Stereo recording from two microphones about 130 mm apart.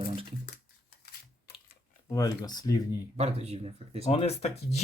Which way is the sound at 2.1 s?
25° left (ahead or behind).